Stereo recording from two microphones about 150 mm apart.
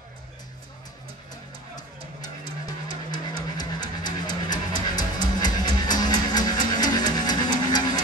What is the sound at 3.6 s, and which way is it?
Music, 30° left (ahead or behind).